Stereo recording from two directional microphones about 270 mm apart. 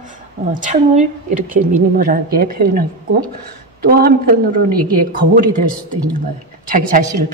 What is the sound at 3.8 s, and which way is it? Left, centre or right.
Speech, right.